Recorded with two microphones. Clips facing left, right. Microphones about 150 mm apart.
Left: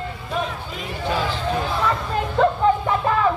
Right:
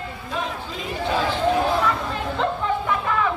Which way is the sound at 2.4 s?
35° left (ahead or behind).